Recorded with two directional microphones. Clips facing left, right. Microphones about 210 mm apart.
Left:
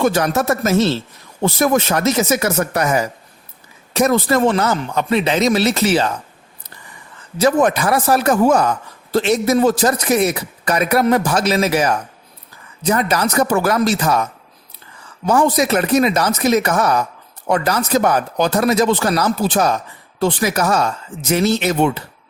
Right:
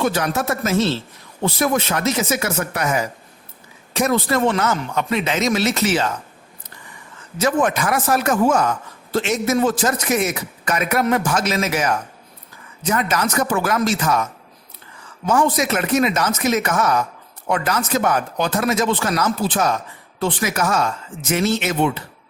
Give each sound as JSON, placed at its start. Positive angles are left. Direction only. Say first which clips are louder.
{"t": 0.0, "sound": "a man's voice", "louder": "left 4 dB", "side_deg": 45}
{"t": 7.3, "sound": "a man's voice", "louder": "left 4 dB", "side_deg": 35}
{"t": 15.3, "sound": "a man's voice", "louder": "left 3 dB", "side_deg": 35}